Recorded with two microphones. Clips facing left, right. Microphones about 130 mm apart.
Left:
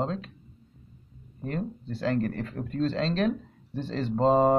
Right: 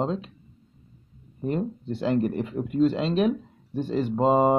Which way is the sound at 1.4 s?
20° right (ahead or behind).